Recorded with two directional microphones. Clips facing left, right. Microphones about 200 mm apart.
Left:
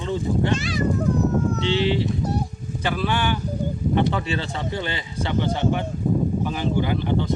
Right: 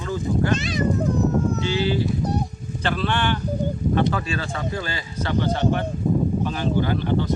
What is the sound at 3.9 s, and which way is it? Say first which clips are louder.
A man's voice: left 2 dB; 25° left (ahead or behind).